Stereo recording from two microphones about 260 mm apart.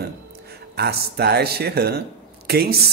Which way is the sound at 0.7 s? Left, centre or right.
Right.